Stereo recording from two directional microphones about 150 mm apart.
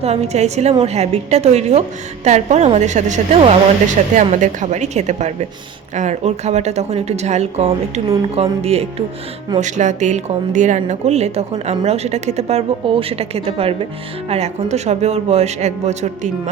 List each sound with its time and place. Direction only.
0.0 s a woman's voice: 45° right (ahead or behind)
4.1 s a woman's voice: 55° right (ahead or behind)
9.6 s a woman's voice: 55° right (ahead or behind)